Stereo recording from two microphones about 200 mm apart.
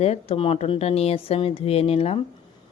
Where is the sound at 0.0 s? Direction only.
30° left (ahead or behind).